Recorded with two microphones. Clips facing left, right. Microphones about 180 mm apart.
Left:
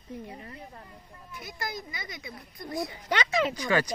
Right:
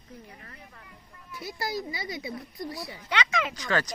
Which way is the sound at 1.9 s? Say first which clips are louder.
Right 6 dB; 30° right (ahead or behind).